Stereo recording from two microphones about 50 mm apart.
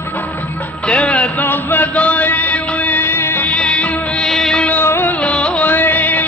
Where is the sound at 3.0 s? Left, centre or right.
Left.